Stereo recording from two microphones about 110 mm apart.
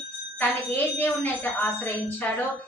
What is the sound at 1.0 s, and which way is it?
A woman's voice, 20° left (ahead or behind).